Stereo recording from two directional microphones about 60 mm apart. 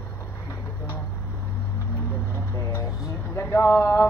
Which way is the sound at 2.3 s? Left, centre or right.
Left.